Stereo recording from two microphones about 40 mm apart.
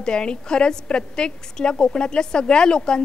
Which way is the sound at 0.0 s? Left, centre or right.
Left.